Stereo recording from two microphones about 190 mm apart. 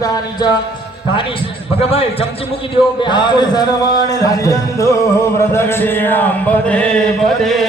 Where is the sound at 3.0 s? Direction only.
25° left (ahead or behind).